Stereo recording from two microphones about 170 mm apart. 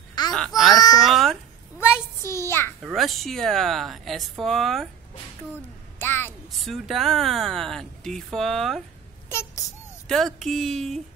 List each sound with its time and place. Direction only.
0.2 s a sound: 25° left (ahead or behind)
0.7 s baby cry: 20° left (ahead or behind)
1.0 s cat: centre (ahead or behind)
1.8 s child singing: 15° left (ahead or behind)
2.8 s speech: centre (ahead or behind)
5.9 s a sound: 15° left (ahead or behind)
6.5 s speech: centre (ahead or behind)
10.0 s speech: centre (ahead or behind)